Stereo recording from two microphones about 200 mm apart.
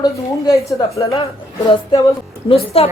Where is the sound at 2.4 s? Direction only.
30° left (ahead or behind).